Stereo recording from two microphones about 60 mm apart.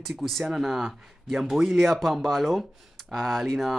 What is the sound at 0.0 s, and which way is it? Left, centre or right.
Speech, centre.